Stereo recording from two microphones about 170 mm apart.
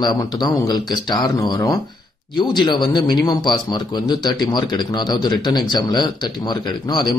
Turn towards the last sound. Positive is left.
turn(degrees=25)  # may be behind; listen again after turning